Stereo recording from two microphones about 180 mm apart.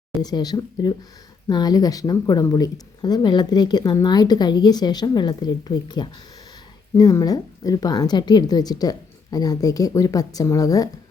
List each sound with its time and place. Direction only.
0.2 s speech: 20° left (ahead or behind)